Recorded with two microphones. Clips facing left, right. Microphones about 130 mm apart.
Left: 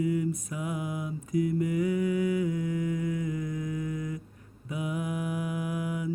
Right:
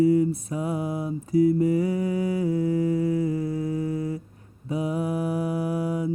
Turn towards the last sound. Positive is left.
turn(degrees=-35)  # may be behind; listen again after turning